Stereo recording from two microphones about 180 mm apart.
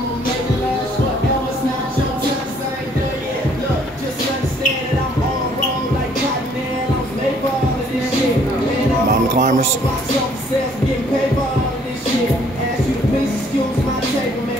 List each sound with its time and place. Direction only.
9.1 s music: 50° right (ahead or behind)